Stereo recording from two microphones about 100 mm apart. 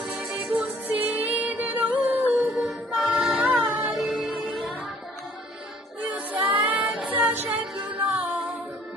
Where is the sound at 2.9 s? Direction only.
5° right (ahead or behind).